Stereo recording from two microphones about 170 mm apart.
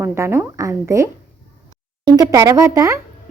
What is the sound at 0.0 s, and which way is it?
A woman's voice, 15° right (ahead or behind).